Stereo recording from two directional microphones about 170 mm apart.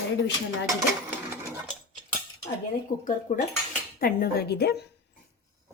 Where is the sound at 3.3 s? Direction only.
40° left (ahead or behind).